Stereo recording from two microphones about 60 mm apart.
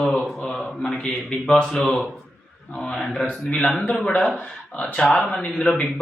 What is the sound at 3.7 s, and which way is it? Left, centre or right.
Speech, centre.